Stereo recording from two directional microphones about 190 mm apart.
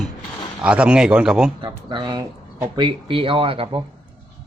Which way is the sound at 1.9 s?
25° right (ahead or behind).